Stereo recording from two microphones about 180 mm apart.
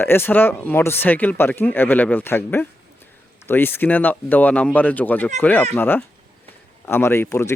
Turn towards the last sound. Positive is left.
turn(degrees=15)  # may be behind; listen again after turning